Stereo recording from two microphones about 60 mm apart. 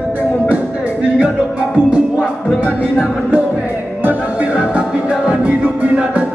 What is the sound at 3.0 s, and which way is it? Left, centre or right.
Music, right.